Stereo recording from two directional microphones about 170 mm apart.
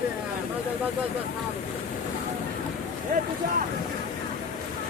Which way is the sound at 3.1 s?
60° right (ahead or behind).